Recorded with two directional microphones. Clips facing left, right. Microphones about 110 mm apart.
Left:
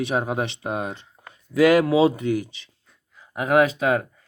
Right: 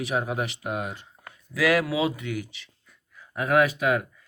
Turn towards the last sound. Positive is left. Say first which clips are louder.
# left 3 dB
turn(degrees=30)  # may be behind; listen again after turning